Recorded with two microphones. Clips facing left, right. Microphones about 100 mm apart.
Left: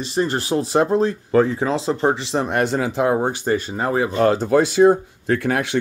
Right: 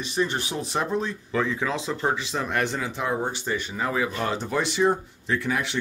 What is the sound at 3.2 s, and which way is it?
Speech, 45° left (ahead or behind).